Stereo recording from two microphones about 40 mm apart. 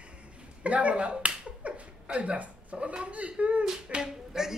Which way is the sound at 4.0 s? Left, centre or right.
Centre.